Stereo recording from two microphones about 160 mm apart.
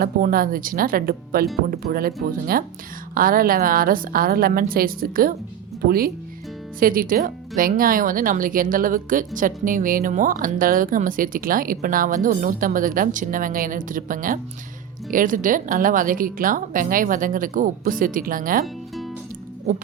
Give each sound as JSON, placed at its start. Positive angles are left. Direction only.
{"t": 0.0, "sound": "speech", "side_deg": -65}
{"t": 18.6, "sound": "music", "side_deg": 0}